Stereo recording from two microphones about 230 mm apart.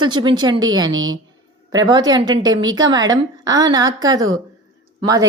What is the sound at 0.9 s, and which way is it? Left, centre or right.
Speech, right.